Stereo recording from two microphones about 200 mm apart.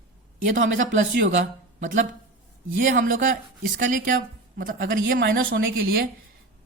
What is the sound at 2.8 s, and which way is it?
A woman's voice, 40° right (ahead or behind).